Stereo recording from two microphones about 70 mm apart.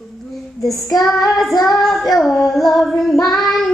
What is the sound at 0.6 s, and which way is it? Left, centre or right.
Child singing, left.